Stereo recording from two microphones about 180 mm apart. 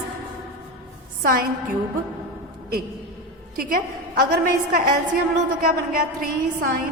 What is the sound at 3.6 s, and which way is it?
Speech, 50° right (ahead or behind).